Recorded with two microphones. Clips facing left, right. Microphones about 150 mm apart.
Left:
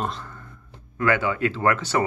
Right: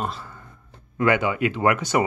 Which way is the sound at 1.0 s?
15° right (ahead or behind).